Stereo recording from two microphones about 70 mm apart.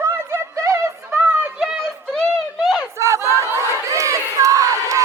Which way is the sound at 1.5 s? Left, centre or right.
Centre.